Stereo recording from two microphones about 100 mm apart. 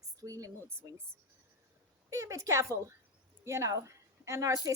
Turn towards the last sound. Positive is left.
turn(degrees=-35)  # may be behind; listen again after turning